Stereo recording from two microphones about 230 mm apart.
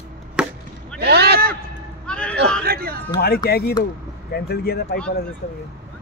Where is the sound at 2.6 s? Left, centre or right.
Right.